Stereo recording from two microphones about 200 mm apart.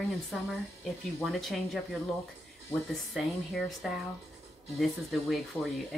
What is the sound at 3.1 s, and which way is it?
Speech, centre (ahead or behind).